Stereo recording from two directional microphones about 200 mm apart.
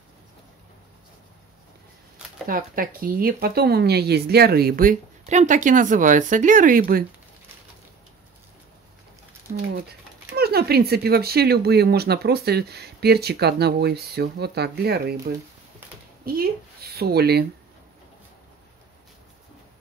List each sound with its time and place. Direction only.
2.4 s speech: 45° right (ahead or behind)
10.3 s speech: 50° right (ahead or behind)
16.9 s speech: 50° right (ahead or behind)